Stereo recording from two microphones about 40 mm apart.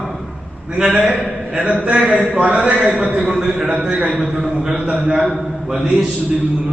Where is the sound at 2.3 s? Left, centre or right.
Right.